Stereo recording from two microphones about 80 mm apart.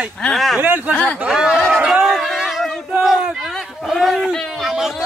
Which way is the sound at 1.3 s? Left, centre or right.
Centre.